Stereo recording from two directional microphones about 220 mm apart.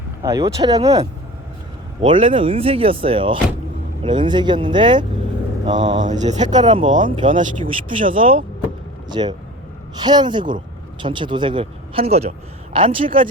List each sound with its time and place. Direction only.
0.2 s speech: 15° right (ahead or behind)
2.0 s speech: 25° right (ahead or behind)
6.1 s speech: 30° right (ahead or behind)